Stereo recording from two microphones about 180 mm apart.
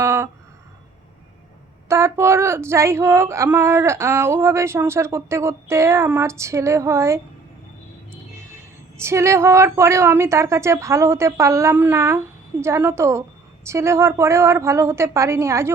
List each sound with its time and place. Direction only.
0.0 s a sound: 15° right (ahead or behind)
1.9 s speech: 15° right (ahead or behind)
9.0 s speech: 15° right (ahead or behind)